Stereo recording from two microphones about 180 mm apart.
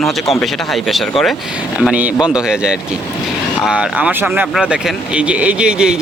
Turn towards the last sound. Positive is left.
turn(degrees=-5)  # may be behind; listen again after turning